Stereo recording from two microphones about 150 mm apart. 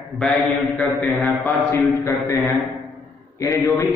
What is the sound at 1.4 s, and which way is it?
Speech, 15° left (ahead or behind).